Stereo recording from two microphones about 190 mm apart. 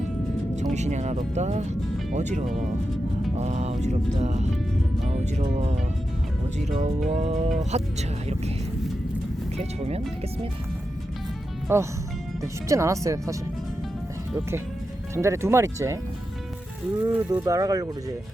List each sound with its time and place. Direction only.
0.5 s music: 35° right (ahead or behind)
11.7 s speech: 15° right (ahead or behind)
15.1 s speech: 15° right (ahead or behind)
17.1 s speech: 10° right (ahead or behind)